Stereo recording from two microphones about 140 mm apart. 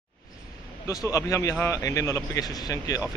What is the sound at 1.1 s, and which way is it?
Speech, 20° left (ahead or behind).